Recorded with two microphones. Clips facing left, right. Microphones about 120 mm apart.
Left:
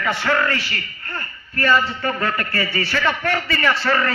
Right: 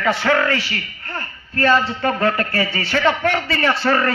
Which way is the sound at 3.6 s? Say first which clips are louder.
Right 3 dB; 25° right (ahead or behind).